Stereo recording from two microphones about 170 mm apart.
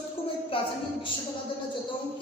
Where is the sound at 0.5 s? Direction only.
30° left (ahead or behind).